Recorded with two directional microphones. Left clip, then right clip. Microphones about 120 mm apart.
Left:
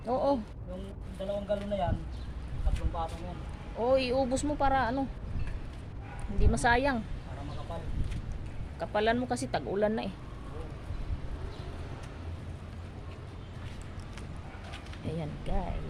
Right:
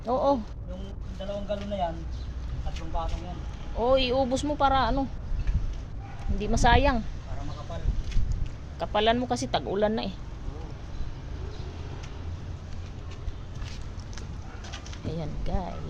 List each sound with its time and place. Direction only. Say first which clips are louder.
0.0 s speech: right 4 dB; 15° right (ahead or behind)
1.3 s speech: even; centre (ahead or behind)
3.8 s speech: right 4 dB; 20° right (ahead or behind)
6.4 s speech: right 4 dB; 25° right (ahead or behind)
8.8 s speech: right 4 dB; 25° right (ahead or behind)
15.0 s speech: right 2 dB; 5° right (ahead or behind)